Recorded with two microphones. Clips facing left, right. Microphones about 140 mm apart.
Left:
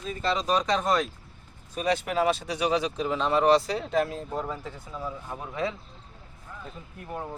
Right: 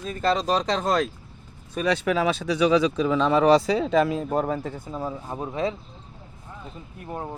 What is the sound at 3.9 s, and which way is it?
Speech, 90° right.